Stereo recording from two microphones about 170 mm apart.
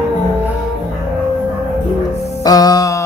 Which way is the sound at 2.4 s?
20° left (ahead or behind).